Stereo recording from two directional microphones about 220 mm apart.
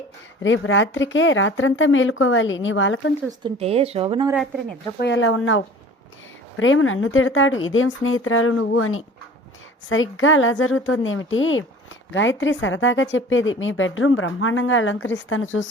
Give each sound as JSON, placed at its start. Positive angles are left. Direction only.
{"t": 0.4, "sound": "a woman's voice", "side_deg": 60}
{"t": 3.2, "sound": "speech", "side_deg": -25}
{"t": 4.9, "sound": "a woman's voice", "side_deg": 55}